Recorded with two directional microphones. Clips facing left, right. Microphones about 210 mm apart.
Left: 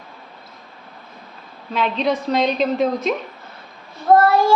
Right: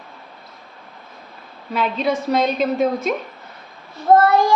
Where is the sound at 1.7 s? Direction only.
5° right (ahead or behind).